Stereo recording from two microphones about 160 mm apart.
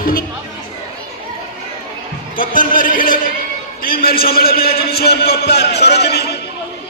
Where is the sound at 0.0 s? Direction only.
60° left (ahead or behind).